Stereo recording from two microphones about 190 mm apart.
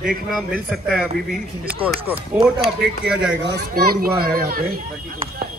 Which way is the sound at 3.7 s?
50° right (ahead or behind).